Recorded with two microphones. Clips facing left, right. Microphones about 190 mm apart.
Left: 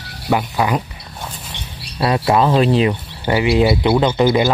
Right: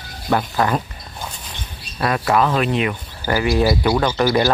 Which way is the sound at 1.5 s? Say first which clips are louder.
Left 2 dB; 75° left (ahead or behind).